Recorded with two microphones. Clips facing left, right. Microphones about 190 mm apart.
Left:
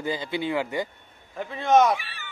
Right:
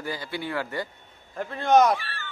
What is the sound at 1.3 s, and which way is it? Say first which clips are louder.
Speech: even; centre (ahead or behind).